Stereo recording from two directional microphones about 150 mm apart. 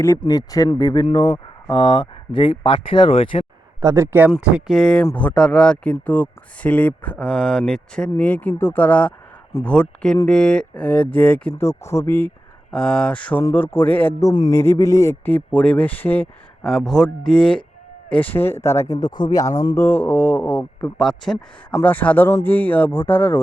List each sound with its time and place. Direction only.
0.2 s speech: 25° left (ahead or behind)
1.0 s speech: 40° left (ahead or behind)
3.8 s speech: 20° right (ahead or behind)
4.4 s speech: 5° right (ahead or behind); by 14.1 s 15° left (ahead or behind)
14.2 s speech: 25° left (ahead or behind)
16.6 s speech: centre (ahead or behind)